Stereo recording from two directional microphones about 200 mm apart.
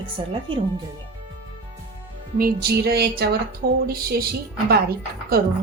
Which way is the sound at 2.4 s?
50° right (ahead or behind).